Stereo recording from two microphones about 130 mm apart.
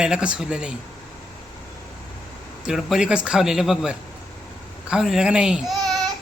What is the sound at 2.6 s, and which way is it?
A man's voice, 5° right (ahead or behind).